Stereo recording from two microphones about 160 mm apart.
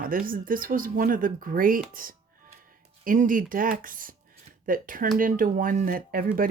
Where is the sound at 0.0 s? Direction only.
60° right (ahead or behind).